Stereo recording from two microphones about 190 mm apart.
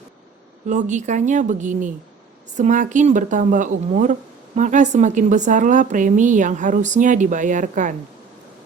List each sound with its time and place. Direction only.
0.7 s speech: 40° right (ahead or behind)